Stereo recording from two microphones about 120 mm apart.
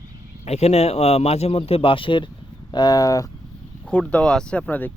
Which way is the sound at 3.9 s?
10° left (ahead or behind).